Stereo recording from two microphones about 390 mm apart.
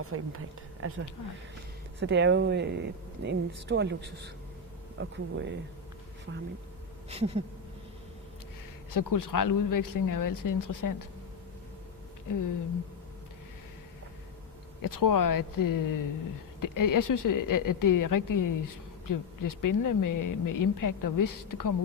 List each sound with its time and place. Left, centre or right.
0.0 s speech: right
7.1 s a sound: centre
8.9 s speech: left
14.8 s speech: left